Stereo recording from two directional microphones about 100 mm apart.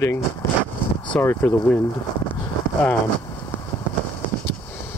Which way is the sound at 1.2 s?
20° left (ahead or behind).